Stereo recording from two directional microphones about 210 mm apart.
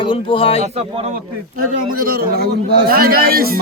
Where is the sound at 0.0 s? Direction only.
25° left (ahead or behind).